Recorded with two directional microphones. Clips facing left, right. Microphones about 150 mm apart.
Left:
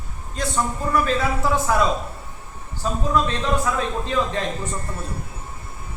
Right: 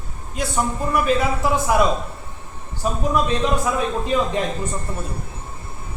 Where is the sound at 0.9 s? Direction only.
15° right (ahead or behind).